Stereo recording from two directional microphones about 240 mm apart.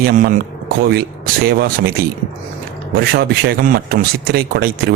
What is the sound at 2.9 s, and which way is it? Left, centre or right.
A man's voice, right.